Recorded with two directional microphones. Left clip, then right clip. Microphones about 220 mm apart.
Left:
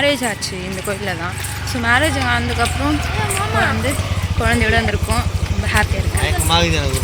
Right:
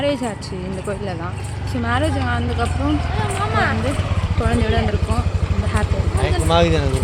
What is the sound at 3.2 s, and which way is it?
Speech, 30° left (ahead or behind).